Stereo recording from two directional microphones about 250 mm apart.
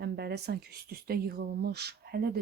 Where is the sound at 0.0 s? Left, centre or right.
Right.